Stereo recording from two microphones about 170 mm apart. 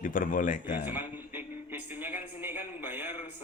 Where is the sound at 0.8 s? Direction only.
10° right (ahead or behind).